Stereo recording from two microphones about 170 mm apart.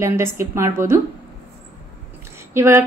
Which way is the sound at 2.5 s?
15° right (ahead or behind).